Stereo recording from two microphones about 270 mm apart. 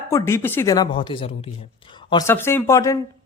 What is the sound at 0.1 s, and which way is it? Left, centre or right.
Speech, centre.